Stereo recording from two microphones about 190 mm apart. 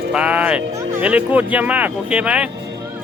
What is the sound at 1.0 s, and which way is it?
Speech, 10° right (ahead or behind).